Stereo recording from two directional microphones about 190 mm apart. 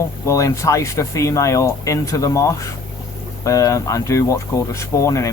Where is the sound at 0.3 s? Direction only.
15° left (ahead or behind).